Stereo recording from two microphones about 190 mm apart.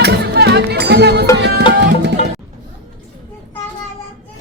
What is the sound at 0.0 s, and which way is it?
Music, 60° right (ahead or behind).